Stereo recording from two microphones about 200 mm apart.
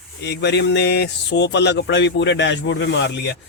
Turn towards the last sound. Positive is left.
turn(degrees=60)  # may be behind; listen again after turning